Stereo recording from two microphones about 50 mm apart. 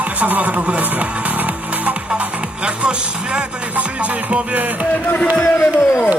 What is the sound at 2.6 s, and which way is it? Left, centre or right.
Music, right.